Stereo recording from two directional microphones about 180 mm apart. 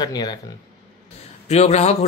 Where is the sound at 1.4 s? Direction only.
35° left (ahead or behind).